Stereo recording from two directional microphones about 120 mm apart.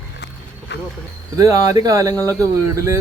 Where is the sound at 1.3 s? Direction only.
30° right (ahead or behind).